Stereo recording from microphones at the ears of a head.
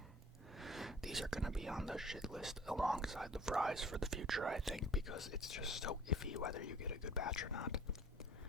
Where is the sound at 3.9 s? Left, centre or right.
Right.